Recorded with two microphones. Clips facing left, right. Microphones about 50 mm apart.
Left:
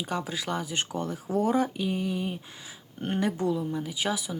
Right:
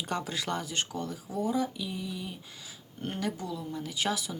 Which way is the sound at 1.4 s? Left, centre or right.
Left.